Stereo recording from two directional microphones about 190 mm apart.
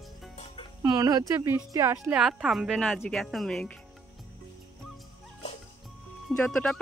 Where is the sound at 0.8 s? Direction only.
20° right (ahead or behind).